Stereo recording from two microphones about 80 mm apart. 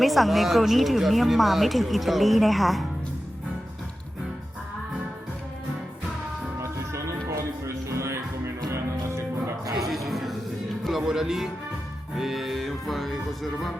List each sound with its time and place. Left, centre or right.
0.0 s speech: centre
6.6 s music: right
9.9 s music: centre